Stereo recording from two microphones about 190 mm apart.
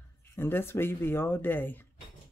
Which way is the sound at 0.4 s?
10° left (ahead or behind).